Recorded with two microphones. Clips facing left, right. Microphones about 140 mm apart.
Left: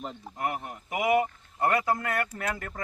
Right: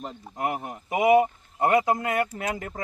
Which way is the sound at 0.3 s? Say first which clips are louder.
Right 4 dB; 20° right (ahead or behind).